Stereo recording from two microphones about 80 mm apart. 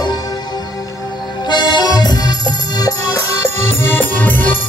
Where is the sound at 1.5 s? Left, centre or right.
Left.